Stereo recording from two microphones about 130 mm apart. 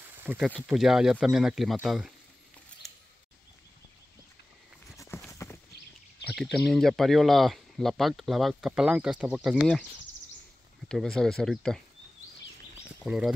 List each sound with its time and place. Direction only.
0.0 s a sound: 15° right (ahead or behind)
0.7 s speech: 5° right (ahead or behind)
4.9 s horse: 20° left (ahead or behind)
6.3 s speech: 5° left (ahead or behind)
10.9 s speech: 5° left (ahead or behind)
13.0 s speech: 5° right (ahead or behind)